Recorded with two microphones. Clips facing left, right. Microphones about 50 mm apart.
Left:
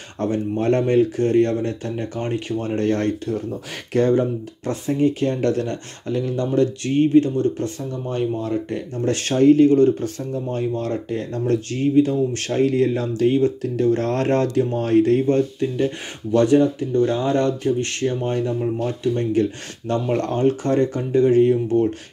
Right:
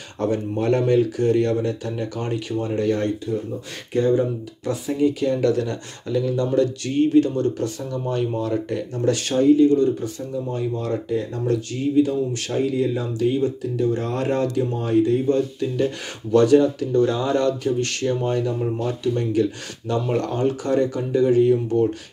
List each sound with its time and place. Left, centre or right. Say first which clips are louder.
0.2 s speech: left 1 dB; left
2.6 s speech: left 1 dB; left
4.2 s speech: left 1 dB; left
15.2 s speech: left 2 dB; left
15.7 s speech: even; left
19.1 s speech: left 1 dB; left